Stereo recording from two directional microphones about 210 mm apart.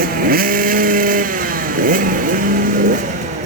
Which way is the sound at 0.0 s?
45° right (ahead or behind).